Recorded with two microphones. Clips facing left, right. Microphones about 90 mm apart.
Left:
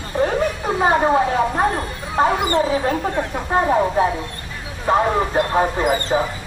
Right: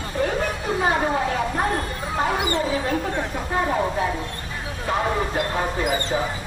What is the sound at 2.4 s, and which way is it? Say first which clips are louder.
Speech: left 5 dB; 45° left (ahead or behind).